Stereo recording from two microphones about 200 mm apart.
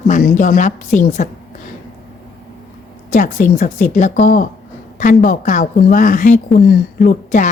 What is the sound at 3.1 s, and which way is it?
A woman's voice, 40° left (ahead or behind).